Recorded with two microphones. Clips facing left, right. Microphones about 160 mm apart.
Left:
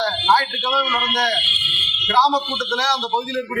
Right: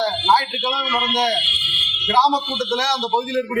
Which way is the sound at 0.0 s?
20° right (ahead or behind).